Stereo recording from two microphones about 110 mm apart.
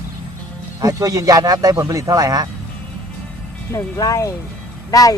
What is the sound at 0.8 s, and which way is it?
Speech, 30° right (ahead or behind).